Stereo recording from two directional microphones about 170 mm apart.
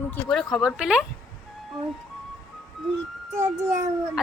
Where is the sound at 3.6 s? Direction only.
20° right (ahead or behind).